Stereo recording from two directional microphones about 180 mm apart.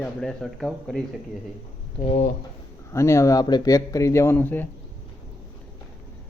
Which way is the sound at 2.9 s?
15° left (ahead or behind).